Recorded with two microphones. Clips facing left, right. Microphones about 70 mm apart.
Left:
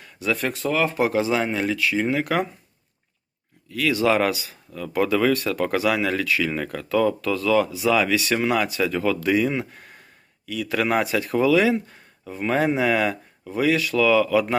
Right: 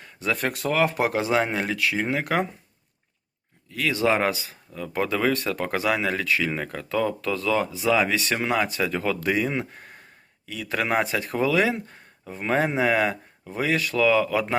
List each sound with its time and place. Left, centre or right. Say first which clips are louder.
0.0 s speech: left 1 dB; right
0.5 s speech: even; right
3.7 s speech: left 2 dB; right
8.4 s speech: left 2 dB; right
9.4 s speech: left 3 dB; centre
10.4 s speech: left 4 dB; right
11.0 s speech: left 4 dB; right
12.2 s speech: left 2 dB; right